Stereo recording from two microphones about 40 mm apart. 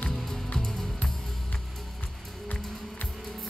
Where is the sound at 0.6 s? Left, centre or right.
Centre.